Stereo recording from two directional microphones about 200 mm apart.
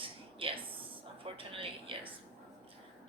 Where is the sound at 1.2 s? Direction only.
25° right (ahead or behind).